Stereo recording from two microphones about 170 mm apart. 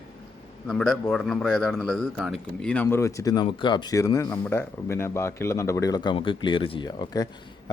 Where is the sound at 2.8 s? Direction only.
20° left (ahead or behind).